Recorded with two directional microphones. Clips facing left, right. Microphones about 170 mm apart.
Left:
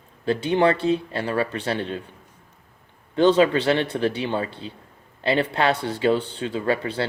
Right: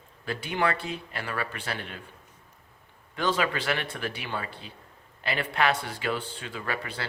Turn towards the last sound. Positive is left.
turn(degrees=30)  # may be behind; listen again after turning